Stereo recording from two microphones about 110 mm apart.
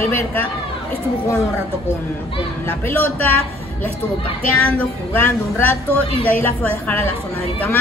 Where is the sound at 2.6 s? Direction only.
20° left (ahead or behind).